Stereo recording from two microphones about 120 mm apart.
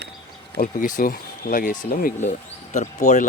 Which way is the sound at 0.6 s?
90° left.